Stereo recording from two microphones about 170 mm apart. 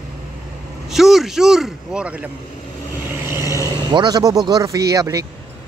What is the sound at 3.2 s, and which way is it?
Vehicle, 15° right (ahead or behind).